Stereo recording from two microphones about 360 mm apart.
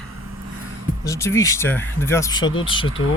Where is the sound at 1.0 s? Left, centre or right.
Centre.